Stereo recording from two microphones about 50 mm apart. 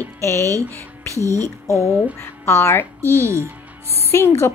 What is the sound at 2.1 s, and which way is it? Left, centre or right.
Speech, left.